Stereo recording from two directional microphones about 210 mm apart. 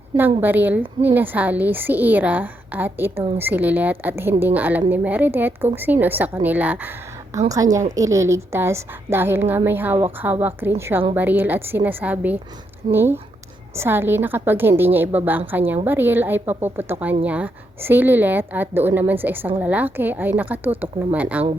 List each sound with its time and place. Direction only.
0.4 s a woman's voice: 10° right (ahead or behind)